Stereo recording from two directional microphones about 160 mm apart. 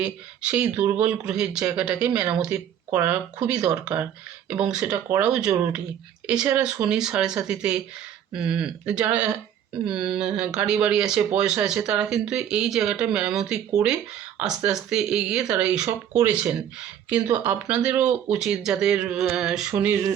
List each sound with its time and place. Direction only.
0.0 s speech: 10° right (ahead or behind)